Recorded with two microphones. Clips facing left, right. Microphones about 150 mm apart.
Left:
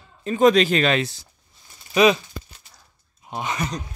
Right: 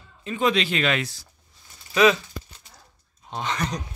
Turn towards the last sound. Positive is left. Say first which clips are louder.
# left 1 dB
turn(degrees=5)  # may be behind; listen again after turning